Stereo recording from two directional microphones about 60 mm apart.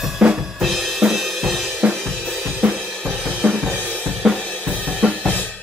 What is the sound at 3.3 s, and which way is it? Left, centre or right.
Music, right.